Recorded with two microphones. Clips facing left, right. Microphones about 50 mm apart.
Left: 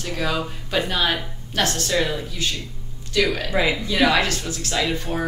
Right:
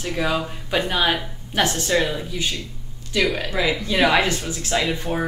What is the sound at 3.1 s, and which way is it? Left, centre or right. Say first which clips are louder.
Speech: even; centre.